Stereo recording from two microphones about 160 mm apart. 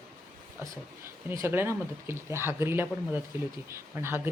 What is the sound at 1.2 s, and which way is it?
Speech, 15° right (ahead or behind).